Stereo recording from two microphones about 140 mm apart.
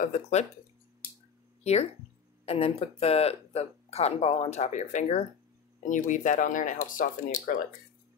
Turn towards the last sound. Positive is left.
turn(degrees=80)